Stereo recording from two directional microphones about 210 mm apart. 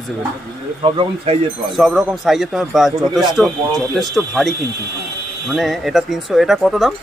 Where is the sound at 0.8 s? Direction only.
25° right (ahead or behind).